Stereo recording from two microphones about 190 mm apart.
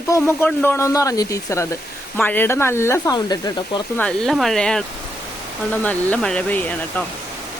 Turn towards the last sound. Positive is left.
turn(degrees=10)  # may be behind; listen again after turning